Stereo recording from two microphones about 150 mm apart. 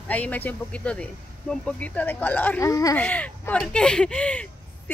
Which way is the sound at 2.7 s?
20° left (ahead or behind).